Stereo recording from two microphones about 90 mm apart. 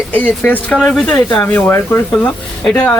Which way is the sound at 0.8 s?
5° left (ahead or behind).